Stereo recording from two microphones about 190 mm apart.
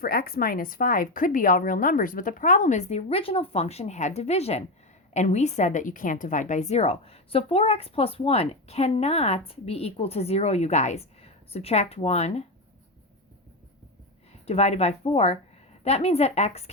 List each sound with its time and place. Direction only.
0.0 s a woman's voice: 50° left (ahead or behind); by 12.4 s 35° left (ahead or behind)
14.4 s a woman's voice: 35° left (ahead or behind)